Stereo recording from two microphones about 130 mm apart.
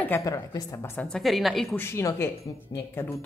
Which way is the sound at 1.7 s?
20° left (ahead or behind).